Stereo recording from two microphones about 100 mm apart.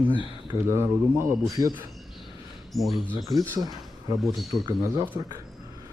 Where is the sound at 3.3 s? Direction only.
40° right (ahead or behind).